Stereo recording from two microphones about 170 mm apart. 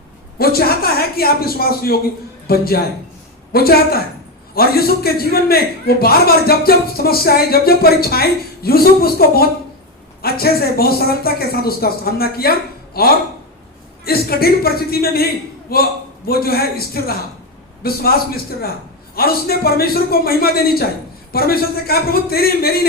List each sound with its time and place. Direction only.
0.3 s a man's voice: 65° left (ahead or behind)